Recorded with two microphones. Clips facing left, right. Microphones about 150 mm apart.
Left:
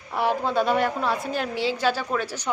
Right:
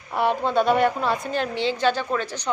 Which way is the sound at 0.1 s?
Centre (ahead or behind).